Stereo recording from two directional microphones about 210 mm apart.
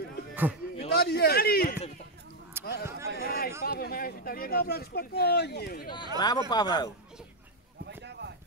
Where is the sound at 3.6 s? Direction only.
45° left (ahead or behind).